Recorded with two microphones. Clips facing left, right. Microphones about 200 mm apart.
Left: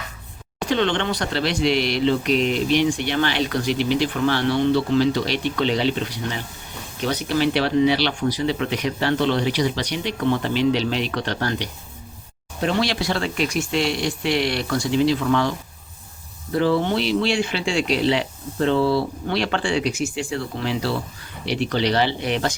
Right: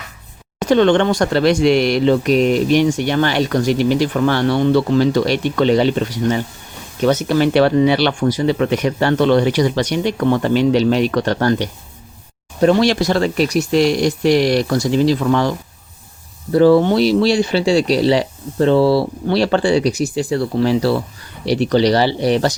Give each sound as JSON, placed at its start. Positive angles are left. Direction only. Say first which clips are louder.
{"t": 0.6, "sound": "speech", "louder": "right 9 dB", "side_deg": -45}